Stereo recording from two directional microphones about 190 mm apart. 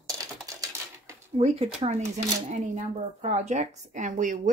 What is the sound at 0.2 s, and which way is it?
Typing, 20° right (ahead or behind).